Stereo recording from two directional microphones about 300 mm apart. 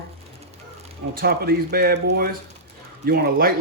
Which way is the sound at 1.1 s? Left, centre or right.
Right.